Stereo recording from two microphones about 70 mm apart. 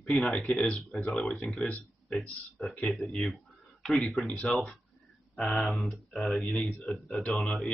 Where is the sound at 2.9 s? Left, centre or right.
Centre.